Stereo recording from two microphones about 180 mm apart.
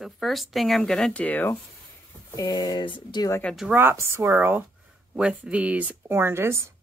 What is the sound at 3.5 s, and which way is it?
Speech, 5° right (ahead or behind).